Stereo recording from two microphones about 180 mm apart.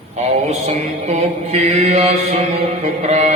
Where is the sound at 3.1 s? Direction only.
40° right (ahead or behind).